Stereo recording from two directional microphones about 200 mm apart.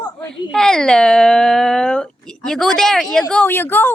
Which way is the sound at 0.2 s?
5° left (ahead or behind).